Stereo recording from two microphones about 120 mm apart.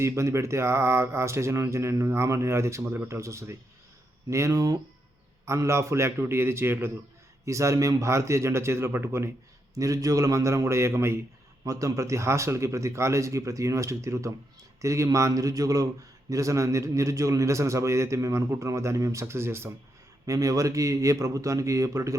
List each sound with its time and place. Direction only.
0.0 s a man's voice: 25° right (ahead or behind)